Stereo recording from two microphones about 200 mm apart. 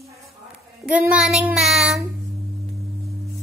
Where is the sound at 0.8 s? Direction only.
5° right (ahead or behind).